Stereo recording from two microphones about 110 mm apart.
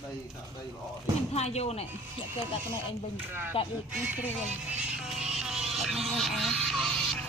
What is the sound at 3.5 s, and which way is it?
Speech, 55° left (ahead or behind).